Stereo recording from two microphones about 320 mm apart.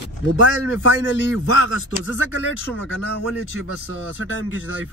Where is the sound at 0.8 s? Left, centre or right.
Left.